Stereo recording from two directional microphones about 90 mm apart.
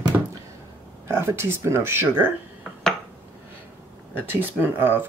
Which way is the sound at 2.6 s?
5° left (ahead or behind).